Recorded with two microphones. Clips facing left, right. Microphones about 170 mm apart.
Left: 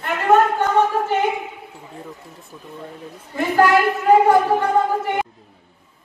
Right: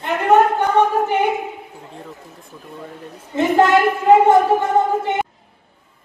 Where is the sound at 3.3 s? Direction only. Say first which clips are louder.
Right 2 dB; 20° right (ahead or behind).